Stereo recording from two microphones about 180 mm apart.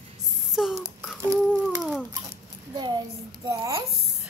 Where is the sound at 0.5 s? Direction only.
Centre (ahead or behind).